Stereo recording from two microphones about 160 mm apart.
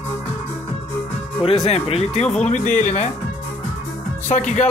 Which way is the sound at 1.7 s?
40° left (ahead or behind).